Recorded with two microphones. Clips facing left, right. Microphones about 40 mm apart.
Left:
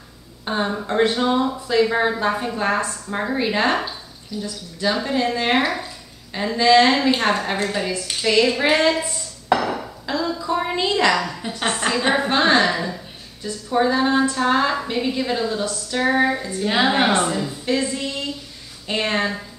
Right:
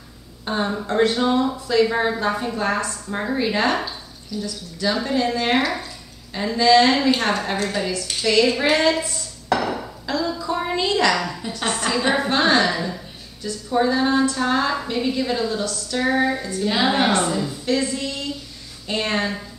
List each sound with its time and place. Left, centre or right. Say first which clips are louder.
0.5 s speech: even; centre
3.1 s a woman's voice: even; centre
9.6 s dishes: left 1 dB; centre
10.0 s a sound: left 1 dB; centre
11.1 s a woman's voice: left 1 dB; centre
11.4 s a woman's voice: left 1 dB; left
11.9 s a woman's voice: even; centre